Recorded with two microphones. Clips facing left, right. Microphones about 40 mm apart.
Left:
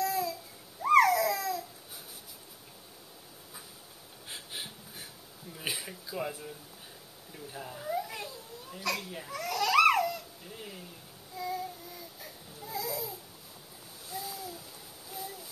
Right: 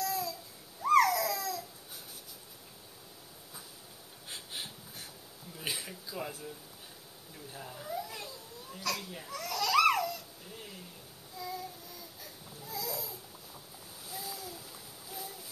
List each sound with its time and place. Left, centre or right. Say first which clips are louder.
0.0 s babbling: left 4 dB; centre
4.3 s a sound: left 1 dB; centre
7.3 s speech: left 3 dB; centre
7.9 s babbling: left 5 dB; centre
11.3 s child singing: left 5 dB; centre
12.2 s baby cry: left 2 dB; centre
14.0 s splash: left 3 dB; centre
15.0 s a sound: left 3 dB; centre